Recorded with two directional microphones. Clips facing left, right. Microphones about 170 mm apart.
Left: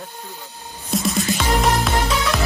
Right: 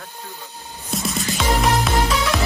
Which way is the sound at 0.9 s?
Centre (ahead or behind).